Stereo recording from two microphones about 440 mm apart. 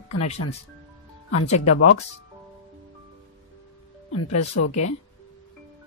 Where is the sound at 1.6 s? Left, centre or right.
Left.